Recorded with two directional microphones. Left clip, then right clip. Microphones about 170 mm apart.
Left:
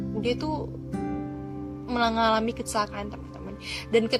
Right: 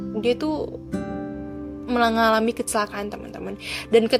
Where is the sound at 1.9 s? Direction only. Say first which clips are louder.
Right 4 dB; 40° right (ahead or behind).